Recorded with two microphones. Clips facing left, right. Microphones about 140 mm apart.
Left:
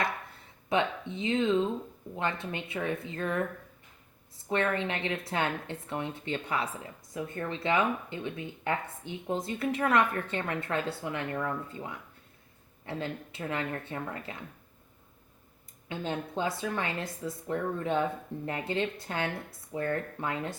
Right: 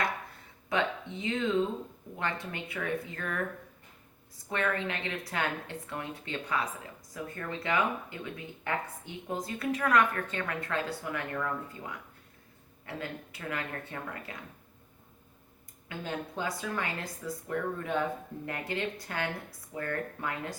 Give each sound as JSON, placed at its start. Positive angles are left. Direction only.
{"t": 0.7, "sound": "speech", "side_deg": 25}
{"t": 4.4, "sound": "speech", "side_deg": 20}
{"t": 15.9, "sound": "speech", "side_deg": 25}